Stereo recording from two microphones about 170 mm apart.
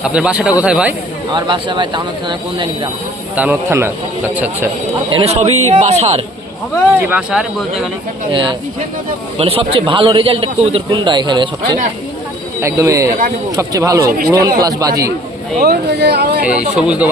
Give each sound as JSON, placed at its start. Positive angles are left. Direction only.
{"t": 0.0, "sound": "speech", "side_deg": -5}
{"t": 1.3, "sound": "speech", "side_deg": -30}
{"t": 3.3, "sound": "speech", "side_deg": -10}
{"t": 5.1, "sound": "a man's voice", "side_deg": -40}
{"t": 7.1, "sound": "speech", "side_deg": -5}
{"t": 8.3, "sound": "a man's voice", "side_deg": -30}
{"t": 15.6, "sound": "speech", "side_deg": -75}
{"t": 16.5, "sound": "speech", "side_deg": -5}